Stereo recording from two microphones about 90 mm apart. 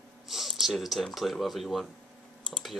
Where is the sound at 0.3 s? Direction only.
Centre (ahead or behind).